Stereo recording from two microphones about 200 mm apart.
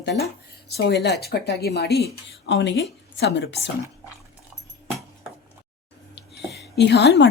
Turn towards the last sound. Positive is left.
turn(degrees=55)  # may be behind; listen again after turning